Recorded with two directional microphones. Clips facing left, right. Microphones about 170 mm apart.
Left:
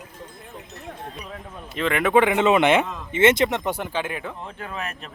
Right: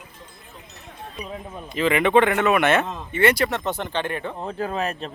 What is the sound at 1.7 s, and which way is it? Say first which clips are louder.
Speech: right 1 dB; centre (ahead or behind).